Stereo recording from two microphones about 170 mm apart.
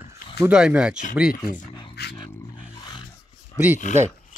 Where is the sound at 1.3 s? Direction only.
65° left (ahead or behind).